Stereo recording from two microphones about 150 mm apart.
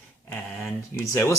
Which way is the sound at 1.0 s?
15° left (ahead or behind).